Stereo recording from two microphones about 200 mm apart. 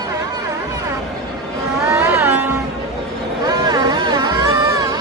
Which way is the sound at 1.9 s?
10° right (ahead or behind).